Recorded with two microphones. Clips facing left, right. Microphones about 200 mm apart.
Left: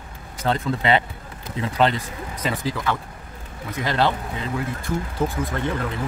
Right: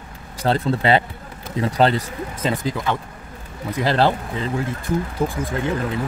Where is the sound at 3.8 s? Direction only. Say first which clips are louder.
Right 4 dB; 35° right (ahead or behind).